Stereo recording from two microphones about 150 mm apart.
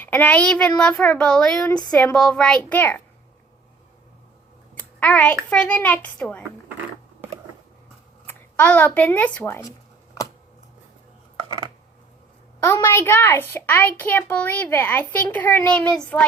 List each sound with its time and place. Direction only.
0.0 s a child's voice: 10° left (ahead or behind)
4.7 s a child's voice: 10° left (ahead or behind)
8.3 s speech: 10° left (ahead or behind)
11.4 s a sound: 30° right (ahead or behind)
12.6 s a child's voice: 15° left (ahead or behind)